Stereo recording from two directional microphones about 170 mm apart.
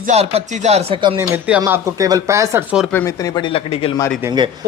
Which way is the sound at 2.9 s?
15° left (ahead or behind).